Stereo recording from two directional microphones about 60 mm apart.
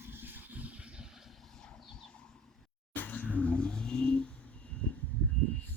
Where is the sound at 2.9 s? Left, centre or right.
Left.